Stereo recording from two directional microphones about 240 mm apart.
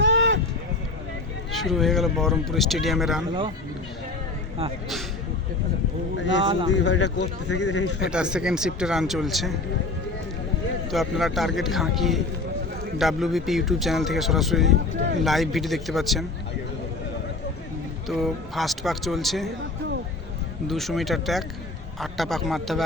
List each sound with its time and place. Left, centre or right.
0.0 s run: right
1.5 s a man's voice: centre
6.1 s speech: left
6.4 s speech: right
6.7 s speech: left
8.1 s a man's voice: centre
10.9 s a man's voice: centre
18.1 s a man's voice: centre
20.7 s a man's voice: centre